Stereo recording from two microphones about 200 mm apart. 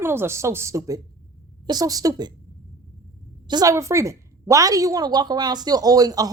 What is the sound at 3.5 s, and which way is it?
A woman's voice, 20° right (ahead or behind).